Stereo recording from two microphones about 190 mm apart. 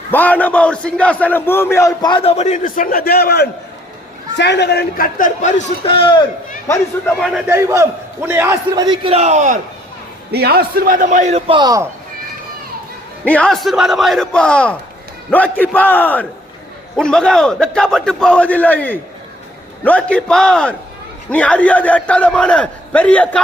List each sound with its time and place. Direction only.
0.1 s a man's voice: 10° left (ahead or behind); by 6.2 s 25° left (ahead or behind)
7.2 s a man's voice: centre (ahead or behind)
7.5 s a man's voice: 15° right (ahead or behind)
9.1 s a man's voice: 35° right (ahead or behind)
10.3 s a man's voice: 55° right (ahead or behind); by 11.9 s 20° right (ahead or behind)
13.2 s a man's voice: 5° left (ahead or behind)